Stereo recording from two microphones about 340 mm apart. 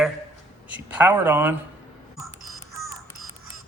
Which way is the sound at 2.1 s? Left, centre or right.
Centre.